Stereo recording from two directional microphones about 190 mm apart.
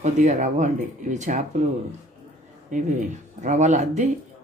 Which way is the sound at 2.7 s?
40° right (ahead or behind).